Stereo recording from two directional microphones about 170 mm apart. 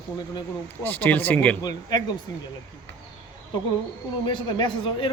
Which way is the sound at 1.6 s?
25° left (ahead or behind).